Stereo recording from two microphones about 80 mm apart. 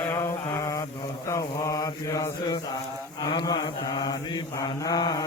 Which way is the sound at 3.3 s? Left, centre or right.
Left.